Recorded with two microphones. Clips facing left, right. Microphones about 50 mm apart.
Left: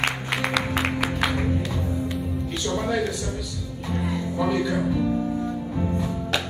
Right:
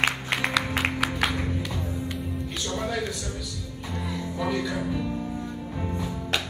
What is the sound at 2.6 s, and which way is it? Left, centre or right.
Music, centre.